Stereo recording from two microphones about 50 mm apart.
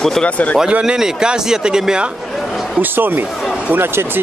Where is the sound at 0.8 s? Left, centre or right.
Centre.